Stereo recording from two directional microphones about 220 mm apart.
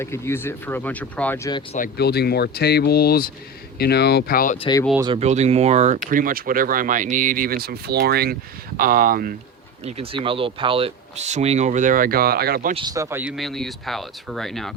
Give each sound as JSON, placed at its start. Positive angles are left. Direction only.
{"t": 0.0, "sound": "speech", "side_deg": 10}
{"t": 2.0, "sound": "speech", "side_deg": 45}
{"t": 4.6, "sound": "speech", "side_deg": 15}
{"t": 4.9, "sound": "speech", "side_deg": -20}
{"t": 9.8, "sound": "speech", "side_deg": -25}
{"t": 12.7, "sound": "speech", "side_deg": -20}